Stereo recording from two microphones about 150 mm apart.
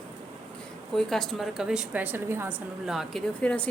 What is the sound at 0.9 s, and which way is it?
A woman's voice, 5° left (ahead or behind).